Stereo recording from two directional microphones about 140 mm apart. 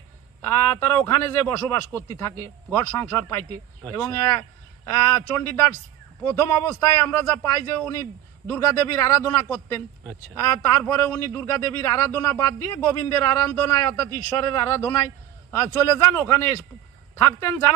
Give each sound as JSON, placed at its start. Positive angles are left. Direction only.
{"t": 0.4, "sound": "a man's voice", "side_deg": 20}